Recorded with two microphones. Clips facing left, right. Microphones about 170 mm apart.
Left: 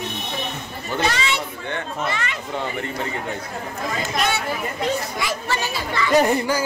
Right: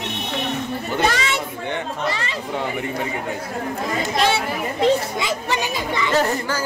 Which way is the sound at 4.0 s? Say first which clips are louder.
Right 4 dB; 30° right (ahead or behind).